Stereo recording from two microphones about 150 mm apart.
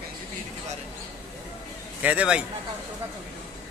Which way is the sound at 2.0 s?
10° right (ahead or behind).